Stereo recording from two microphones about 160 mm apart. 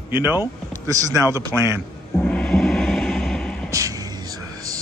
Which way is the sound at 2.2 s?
5° left (ahead or behind).